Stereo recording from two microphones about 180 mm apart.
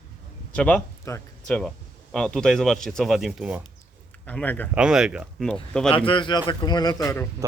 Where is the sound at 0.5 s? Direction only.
5° left (ahead or behind).